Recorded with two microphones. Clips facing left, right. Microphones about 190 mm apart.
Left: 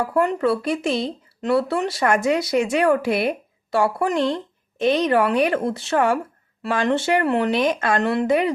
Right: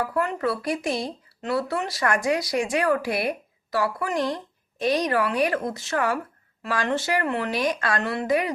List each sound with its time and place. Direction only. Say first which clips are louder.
0.0 s speech: left 5 dB; 25° left (ahead or behind)